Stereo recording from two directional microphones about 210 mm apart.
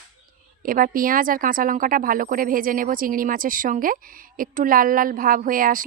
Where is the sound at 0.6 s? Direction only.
40° right (ahead or behind).